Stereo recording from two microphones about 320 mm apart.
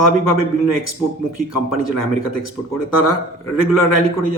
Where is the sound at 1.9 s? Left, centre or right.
Right.